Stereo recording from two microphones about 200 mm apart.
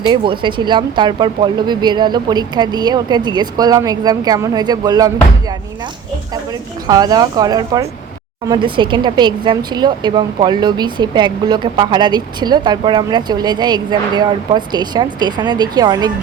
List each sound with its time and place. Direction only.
0.1 s speech: 25° right (ahead or behind)